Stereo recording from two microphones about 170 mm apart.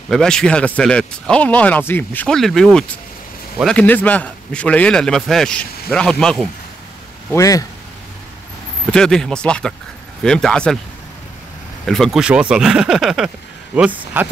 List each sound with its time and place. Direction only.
0.1 s a man's voice: 5° left (ahead or behind)
7.3 s speech: 20° left (ahead or behind)
8.9 s a man's voice: 5° left (ahead or behind)
11.8 s a man's voice: centre (ahead or behind)